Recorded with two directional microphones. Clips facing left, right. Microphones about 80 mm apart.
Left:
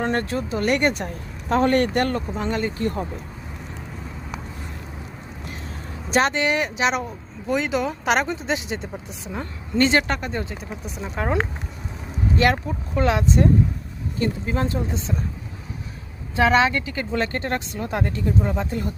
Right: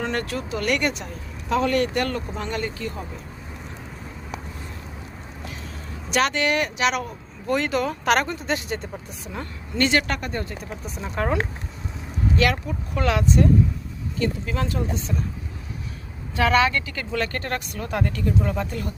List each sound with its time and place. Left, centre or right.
0.0 s speech: left
2.4 s speech: left
2.8 s speech: left
6.1 s speech: left
7.4 s speech: centre
11.0 s speech: centre
12.4 s speech: left
16.3 s speech: left